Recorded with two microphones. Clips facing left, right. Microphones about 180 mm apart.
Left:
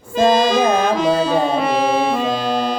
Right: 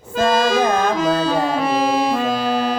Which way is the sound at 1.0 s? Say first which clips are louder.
Left 2 dB; 5° right (ahead or behind).